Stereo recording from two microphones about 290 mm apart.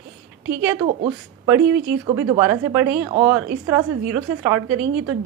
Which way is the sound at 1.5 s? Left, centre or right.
Centre.